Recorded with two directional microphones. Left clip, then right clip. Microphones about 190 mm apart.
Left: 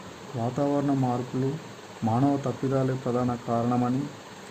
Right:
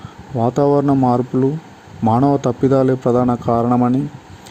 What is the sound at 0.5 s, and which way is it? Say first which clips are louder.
A man's voice: right 11 dB; 40° right (ahead or behind).